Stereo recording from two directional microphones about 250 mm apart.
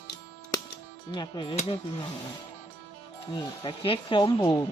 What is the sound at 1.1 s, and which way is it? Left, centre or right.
Speech, centre.